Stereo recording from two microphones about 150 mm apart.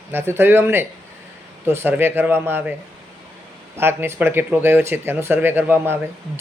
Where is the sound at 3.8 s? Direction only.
15° right (ahead or behind).